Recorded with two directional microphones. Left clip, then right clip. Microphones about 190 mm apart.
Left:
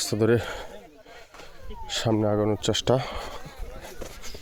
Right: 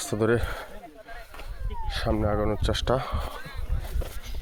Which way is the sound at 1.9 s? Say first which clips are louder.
Left 3 dB; 65° left (ahead or behind).